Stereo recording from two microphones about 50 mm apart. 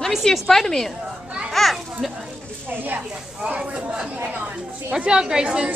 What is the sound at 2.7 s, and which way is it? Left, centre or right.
Speech, right.